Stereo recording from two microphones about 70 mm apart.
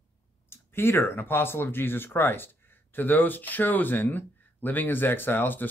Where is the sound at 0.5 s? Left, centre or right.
Left.